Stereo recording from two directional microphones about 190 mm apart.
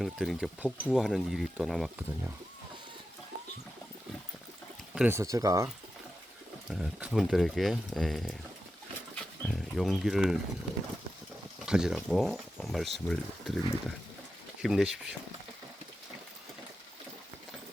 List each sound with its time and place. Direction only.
0.0 s speech: centre (ahead or behind)
4.9 s speech: 10° right (ahead or behind)
6.7 s speech: 5° right (ahead or behind)
11.6 s speech: 5° right (ahead or behind)